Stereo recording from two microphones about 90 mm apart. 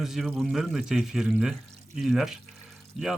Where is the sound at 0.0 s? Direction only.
Centre (ahead or behind).